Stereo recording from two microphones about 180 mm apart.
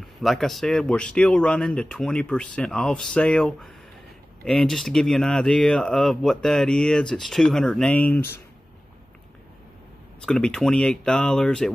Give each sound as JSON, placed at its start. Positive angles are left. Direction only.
{"t": 0.0, "sound": "speech", "side_deg": 0}
{"t": 10.2, "sound": "speech", "side_deg": 5}